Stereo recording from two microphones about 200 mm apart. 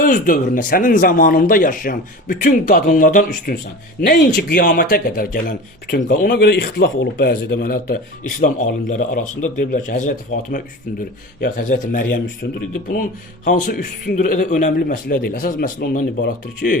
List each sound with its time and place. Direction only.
0.0 s a man's voice: 45° left (ahead or behind)